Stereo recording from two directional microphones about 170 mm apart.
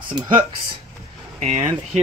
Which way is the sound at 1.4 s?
40° right (ahead or behind).